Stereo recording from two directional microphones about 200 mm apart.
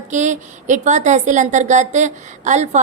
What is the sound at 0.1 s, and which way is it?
A woman's voice, 35° right (ahead or behind).